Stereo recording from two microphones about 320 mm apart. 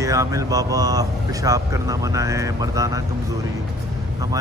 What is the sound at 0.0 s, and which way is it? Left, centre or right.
Speech, centre.